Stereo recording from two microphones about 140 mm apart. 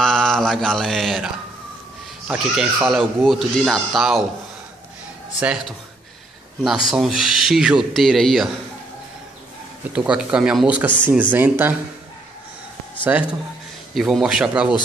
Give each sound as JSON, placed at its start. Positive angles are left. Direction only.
{"t": 0.0, "sound": "mantra", "side_deg": 5}
{"t": 2.2, "sound": "speech", "side_deg": -5}
{"t": 5.4, "sound": "speech", "side_deg": -5}
{"t": 6.9, "sound": "speech", "side_deg": -5}
{"t": 9.9, "sound": "speech", "side_deg": -5}
{"t": 13.0, "sound": "speech", "side_deg": -10}